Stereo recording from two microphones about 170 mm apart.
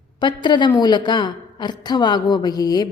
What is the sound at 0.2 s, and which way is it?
A woman's voice, 25° left (ahead or behind).